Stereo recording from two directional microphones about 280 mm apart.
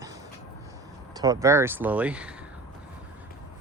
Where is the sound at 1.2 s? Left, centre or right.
Centre.